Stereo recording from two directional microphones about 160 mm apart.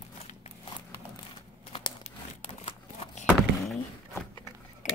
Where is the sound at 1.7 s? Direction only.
25° left (ahead or behind).